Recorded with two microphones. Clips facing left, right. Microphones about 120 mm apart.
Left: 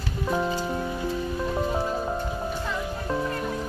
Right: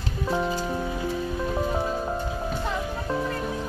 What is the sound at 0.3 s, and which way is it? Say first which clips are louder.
Music: even; centre (ahead or behind).